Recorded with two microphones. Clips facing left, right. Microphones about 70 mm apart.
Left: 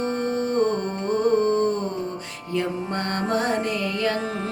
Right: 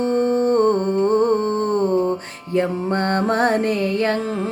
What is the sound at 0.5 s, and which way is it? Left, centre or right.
Humming, right.